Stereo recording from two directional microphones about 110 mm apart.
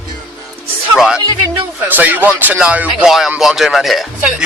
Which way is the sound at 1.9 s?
15° right (ahead or behind).